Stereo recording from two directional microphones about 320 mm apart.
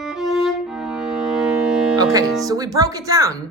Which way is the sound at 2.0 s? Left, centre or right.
Centre.